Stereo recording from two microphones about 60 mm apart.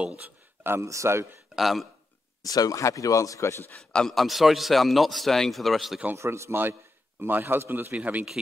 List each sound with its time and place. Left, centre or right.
0.0 s speech: right
0.7 s speech: right
1.5 s a man's voice: centre
2.4 s speech: left
3.7 s a man's voice: centre
6.1 s a man's voice: right
7.9 s speech: right